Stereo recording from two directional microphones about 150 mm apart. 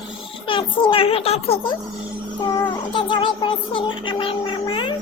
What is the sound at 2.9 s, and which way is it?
Speech, 35° left (ahead or behind).